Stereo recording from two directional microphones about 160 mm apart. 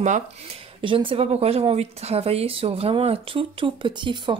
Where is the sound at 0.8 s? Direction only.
35° right (ahead or behind).